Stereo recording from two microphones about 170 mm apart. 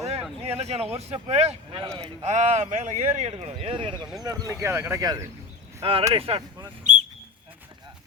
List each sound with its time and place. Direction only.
0.4 s speech: 40° right (ahead or behind)
2.3 s speech: 45° right (ahead or behind); by 5.2 s 20° right (ahead or behind)
5.8 s speech: 30° right (ahead or behind)
6.1 s a sound: 35° right (ahead or behind)